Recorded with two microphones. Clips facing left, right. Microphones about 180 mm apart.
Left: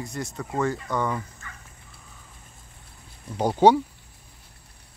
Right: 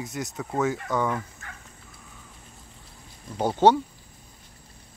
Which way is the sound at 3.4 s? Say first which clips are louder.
Left 2 dB; 10° left (ahead or behind).